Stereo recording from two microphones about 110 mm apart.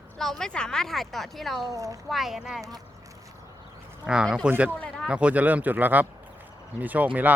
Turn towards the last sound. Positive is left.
turn(degrees=-15)  # may be behind; listen again after turning